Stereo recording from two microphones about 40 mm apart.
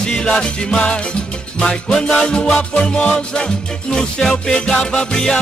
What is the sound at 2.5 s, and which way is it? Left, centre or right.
Music, left.